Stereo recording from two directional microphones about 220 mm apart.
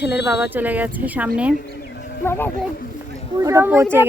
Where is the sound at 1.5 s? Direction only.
50° left (ahead or behind).